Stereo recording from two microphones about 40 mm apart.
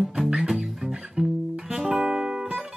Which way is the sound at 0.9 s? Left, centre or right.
Centre.